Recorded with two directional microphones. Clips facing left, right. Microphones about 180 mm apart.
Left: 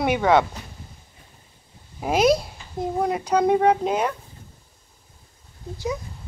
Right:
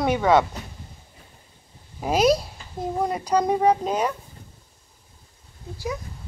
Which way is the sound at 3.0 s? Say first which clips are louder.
Left 1 dB; 10° left (ahead or behind).